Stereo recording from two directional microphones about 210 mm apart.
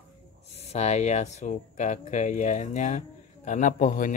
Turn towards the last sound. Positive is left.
turn(degrees=40)  # may be behind; listen again after turning